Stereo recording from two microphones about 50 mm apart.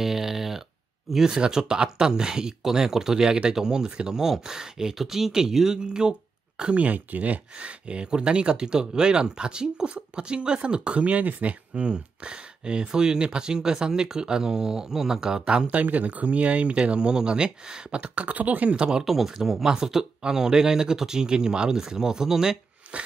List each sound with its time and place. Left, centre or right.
0.0 s a sound: centre
1.1 s speech: centre; by 11.5 s right
11.7 s speech: centre
15.7 s speech: right
18.7 s speech: centre
22.8 s a sound: right